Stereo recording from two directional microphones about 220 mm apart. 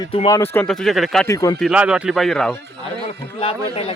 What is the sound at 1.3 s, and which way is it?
Speech, 15° left (ahead or behind).